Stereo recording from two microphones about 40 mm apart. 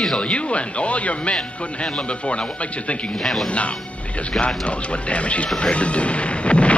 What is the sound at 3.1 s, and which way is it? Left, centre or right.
Speech, centre.